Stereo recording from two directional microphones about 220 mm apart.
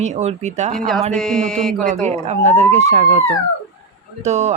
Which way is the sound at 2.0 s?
30° right (ahead or behind).